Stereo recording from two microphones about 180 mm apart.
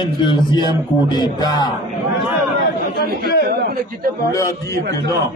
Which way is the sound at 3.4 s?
60° right (ahead or behind).